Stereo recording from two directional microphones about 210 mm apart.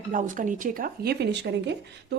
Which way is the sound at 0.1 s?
40° right (ahead or behind).